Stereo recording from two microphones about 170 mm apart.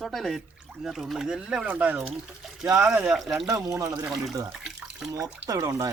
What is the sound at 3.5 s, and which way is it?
Speech, 20° right (ahead or behind).